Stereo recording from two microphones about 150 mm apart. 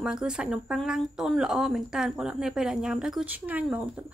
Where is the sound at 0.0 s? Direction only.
5° right (ahead or behind).